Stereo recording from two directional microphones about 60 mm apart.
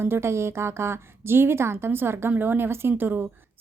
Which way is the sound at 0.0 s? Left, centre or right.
Right.